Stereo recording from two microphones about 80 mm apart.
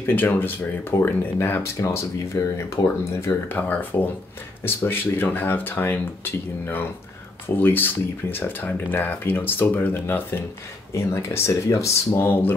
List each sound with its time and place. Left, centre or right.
0.0 s speech: left
1.8 s speech: left
3.5 s speech: left
12.3 s speech: left